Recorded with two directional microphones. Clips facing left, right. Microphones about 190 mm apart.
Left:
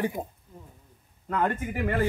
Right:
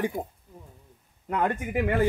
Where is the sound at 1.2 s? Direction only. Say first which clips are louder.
Even; 15° right (ahead or behind).